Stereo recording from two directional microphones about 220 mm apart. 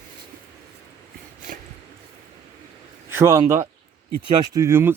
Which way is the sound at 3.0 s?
10° right (ahead or behind).